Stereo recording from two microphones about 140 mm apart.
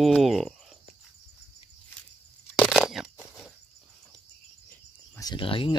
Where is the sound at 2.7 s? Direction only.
Centre (ahead or behind).